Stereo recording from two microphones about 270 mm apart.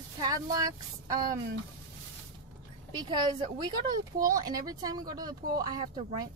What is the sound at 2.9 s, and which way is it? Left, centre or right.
Speech, centre.